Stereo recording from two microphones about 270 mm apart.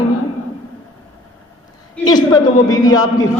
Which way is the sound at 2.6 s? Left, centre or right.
Left.